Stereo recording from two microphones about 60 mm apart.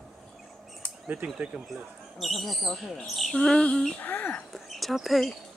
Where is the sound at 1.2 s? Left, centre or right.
Right.